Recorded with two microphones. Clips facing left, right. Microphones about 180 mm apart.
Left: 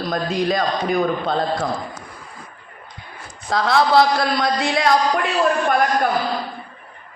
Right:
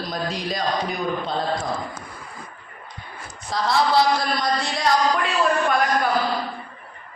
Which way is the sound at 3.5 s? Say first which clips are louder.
Left 4 dB; 65° left (ahead or behind).